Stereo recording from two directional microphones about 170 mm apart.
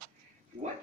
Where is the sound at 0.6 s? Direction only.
45° right (ahead or behind).